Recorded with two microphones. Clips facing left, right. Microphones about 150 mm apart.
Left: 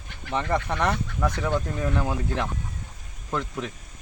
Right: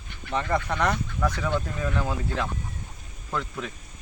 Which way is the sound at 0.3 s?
15° left (ahead or behind).